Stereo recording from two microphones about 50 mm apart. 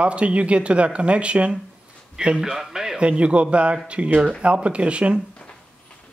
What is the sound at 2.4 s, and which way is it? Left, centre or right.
Speech, centre.